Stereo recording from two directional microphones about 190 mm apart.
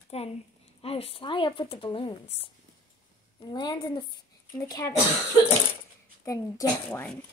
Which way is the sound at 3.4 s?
20° left (ahead or behind).